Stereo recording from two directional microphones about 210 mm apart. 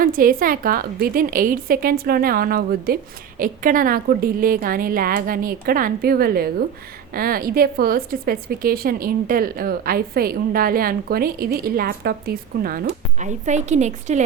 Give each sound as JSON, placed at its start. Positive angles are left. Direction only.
{"t": 0.0, "sound": "a woman's voice", "side_deg": -40}